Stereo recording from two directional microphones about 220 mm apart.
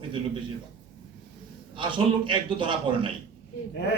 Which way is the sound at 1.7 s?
20° right (ahead or behind).